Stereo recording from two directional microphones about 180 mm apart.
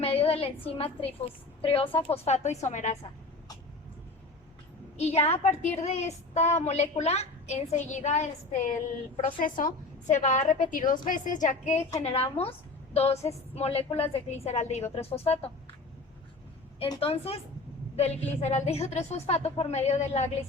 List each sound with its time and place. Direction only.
0.0 s a sound: 35° left (ahead or behind)
0.8 s a woman's voice: 35° left (ahead or behind)
4.9 s a woman's voice: 35° left (ahead or behind)
16.9 s a woman's voice: 35° left (ahead or behind)